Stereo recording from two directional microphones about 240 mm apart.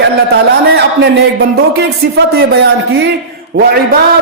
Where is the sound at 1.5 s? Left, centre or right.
Right.